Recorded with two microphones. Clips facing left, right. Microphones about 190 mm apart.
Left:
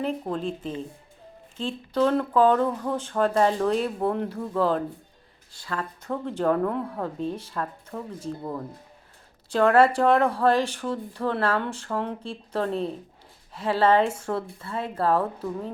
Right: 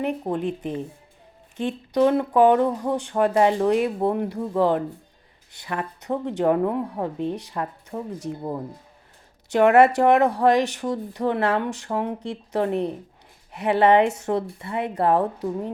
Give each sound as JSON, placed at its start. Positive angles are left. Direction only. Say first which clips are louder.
{"t": 0.1, "sound": "speech", "louder": "right 3 dB", "side_deg": -15}
{"t": 1.9, "sound": "speech", "louder": "right 3 dB", "side_deg": -15}
{"t": 9.5, "sound": "a woman's voice", "louder": "right 3 dB", "side_deg": -20}